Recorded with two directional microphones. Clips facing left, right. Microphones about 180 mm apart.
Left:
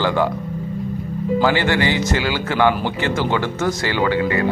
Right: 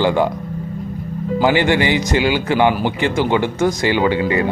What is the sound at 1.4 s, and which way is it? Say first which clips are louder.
Speech: right 4 dB; 15° right (ahead or behind).